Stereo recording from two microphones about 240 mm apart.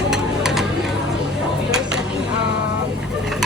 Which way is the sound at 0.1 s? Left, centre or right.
Centre.